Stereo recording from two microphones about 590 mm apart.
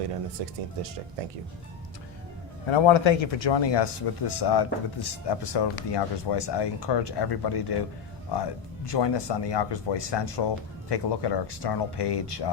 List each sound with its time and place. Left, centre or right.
0.4 s speech: right
2.6 s speech: left